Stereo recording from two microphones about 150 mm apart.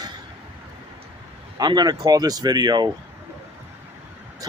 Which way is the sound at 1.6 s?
25° right (ahead or behind).